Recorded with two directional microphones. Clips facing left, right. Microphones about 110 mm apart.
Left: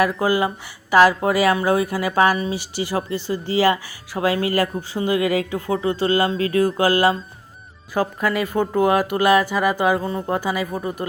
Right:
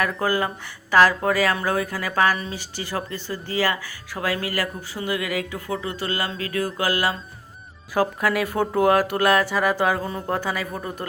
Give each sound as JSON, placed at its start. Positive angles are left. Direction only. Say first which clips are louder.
{"t": 0.0, "sound": "speech", "louder": "left 4 dB", "side_deg": 10}
{"t": 7.9, "sound": "speech", "louder": "even", "side_deg": 0}